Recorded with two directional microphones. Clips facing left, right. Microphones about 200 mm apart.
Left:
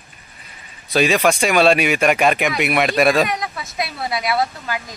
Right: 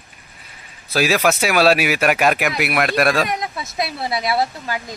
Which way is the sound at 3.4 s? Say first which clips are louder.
Right 1 dB; 30° right (ahead or behind).